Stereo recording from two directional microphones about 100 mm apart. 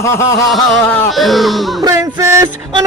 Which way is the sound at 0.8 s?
20° left (ahead or behind).